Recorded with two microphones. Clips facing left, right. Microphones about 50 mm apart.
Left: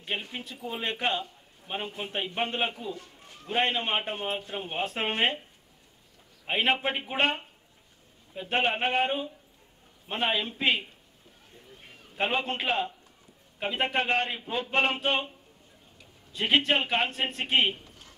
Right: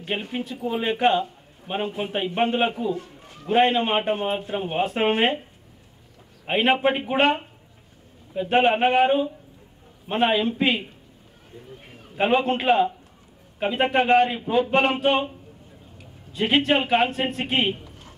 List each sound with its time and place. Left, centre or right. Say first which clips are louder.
0.2 s a man's voice: right 9 dB; centre
2.9 s a man's voice: right 10 dB; right
3.4 s a man's voice: right 8 dB; centre
6.4 s a man's voice: right 6 dB; centre
8.3 s a man's voice: right 8 dB; centre
12.2 s a man's voice: right 8 dB; centre
16.3 s a man's voice: right 4 dB; centre
17.8 s a sound: right 6 dB; right